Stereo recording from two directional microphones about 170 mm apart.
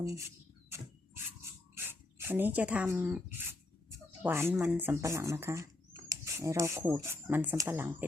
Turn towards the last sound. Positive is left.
turn(degrees=-15)  # may be behind; listen again after turning